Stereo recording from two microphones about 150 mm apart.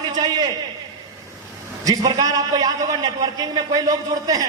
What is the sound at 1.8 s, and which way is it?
A man's voice, 25° right (ahead or behind).